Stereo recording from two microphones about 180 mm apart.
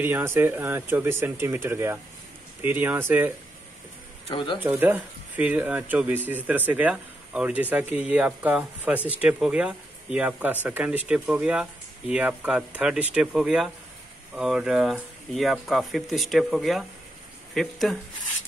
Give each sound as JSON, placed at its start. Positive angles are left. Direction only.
{"t": 0.0, "sound": "speech", "side_deg": -10}
{"t": 4.3, "sound": "speech", "side_deg": 25}
{"t": 4.6, "sound": "speech", "side_deg": -10}